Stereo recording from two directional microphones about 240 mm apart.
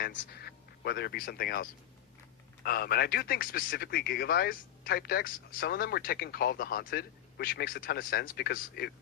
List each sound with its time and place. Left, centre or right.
0.0 s speech: left
2.6 s speech: left